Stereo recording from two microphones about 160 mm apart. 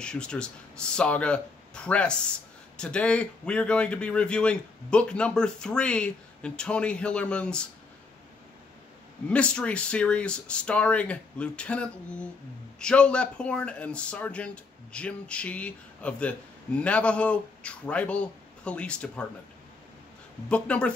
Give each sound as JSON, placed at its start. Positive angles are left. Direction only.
{"t": 0.0, "sound": "a man's voice", "side_deg": 5}
{"t": 9.3, "sound": "a man's voice", "side_deg": 5}
{"t": 20.4, "sound": "a man's voice", "side_deg": 5}